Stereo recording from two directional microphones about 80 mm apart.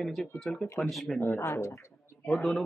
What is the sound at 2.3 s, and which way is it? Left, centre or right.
Speech, centre.